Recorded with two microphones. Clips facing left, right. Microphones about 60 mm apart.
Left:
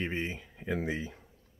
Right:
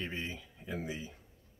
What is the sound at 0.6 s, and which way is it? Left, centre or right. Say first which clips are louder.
Speech: left 7 dB; left.